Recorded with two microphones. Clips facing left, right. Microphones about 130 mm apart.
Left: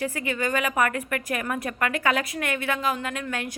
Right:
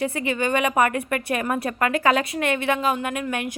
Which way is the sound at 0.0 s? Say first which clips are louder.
Right 3 dB; 25° right (ahead or behind).